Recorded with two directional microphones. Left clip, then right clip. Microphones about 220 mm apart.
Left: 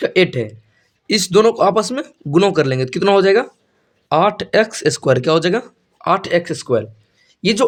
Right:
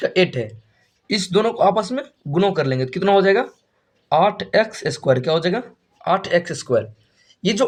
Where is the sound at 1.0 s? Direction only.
50° left (ahead or behind).